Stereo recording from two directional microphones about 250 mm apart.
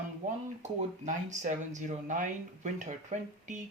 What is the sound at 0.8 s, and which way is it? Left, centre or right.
Speech, right.